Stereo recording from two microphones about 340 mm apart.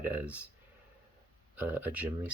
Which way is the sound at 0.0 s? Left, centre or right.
Centre.